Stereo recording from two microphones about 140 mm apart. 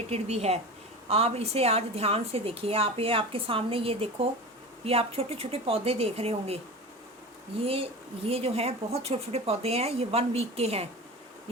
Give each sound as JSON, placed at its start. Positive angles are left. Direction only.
{"t": 0.1, "sound": "a woman's voice", "side_deg": -50}
{"t": 7.6, "sound": "a woman's voice", "side_deg": -40}
{"t": 11.5, "sound": "insect", "side_deg": -45}